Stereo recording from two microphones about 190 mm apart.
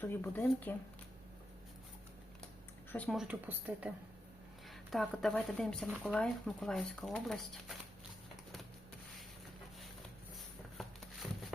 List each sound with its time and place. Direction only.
0.0 s speech: 10° left (ahead or behind)
2.9 s speech: 5° left (ahead or behind)
10.8 s a sound: centre (ahead or behind)